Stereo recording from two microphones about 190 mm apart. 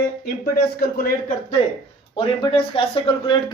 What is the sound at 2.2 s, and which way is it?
Speech, 30° left (ahead or behind).